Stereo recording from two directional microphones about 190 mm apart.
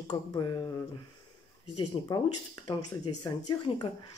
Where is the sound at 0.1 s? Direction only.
20° left (ahead or behind).